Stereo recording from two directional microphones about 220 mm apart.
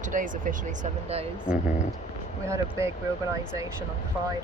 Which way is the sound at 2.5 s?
10° right (ahead or behind).